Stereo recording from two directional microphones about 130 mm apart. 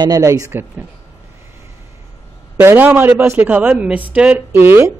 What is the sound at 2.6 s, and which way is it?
A man's voice, 15° right (ahead or behind).